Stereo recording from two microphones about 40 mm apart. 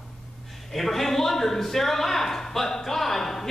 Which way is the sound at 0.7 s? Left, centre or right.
Centre.